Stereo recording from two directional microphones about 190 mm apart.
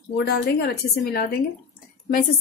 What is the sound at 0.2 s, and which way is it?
Speech, 60° left (ahead or behind).